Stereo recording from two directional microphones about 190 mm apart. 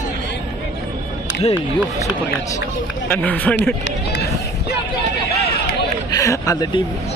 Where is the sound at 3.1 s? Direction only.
10° left (ahead or behind).